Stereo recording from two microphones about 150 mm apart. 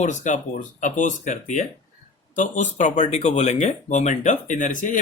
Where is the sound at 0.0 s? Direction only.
55° left (ahead or behind).